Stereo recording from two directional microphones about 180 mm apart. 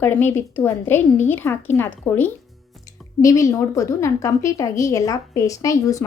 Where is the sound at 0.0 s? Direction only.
10° left (ahead or behind).